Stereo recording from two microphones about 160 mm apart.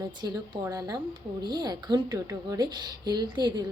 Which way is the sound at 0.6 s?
20° right (ahead or behind).